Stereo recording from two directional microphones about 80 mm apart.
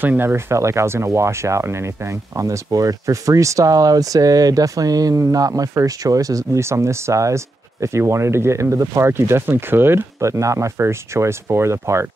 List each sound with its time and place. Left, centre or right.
0.0 s speech: right